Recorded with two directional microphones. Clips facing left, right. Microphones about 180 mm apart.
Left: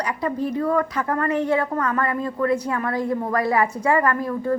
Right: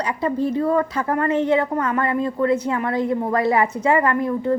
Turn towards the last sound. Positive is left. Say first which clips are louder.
# right 2 dB
turn(degrees=-20)  # may be behind; listen again after turning